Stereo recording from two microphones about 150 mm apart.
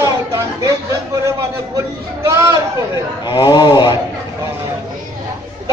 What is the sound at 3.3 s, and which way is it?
Speech, 30° left (ahead or behind).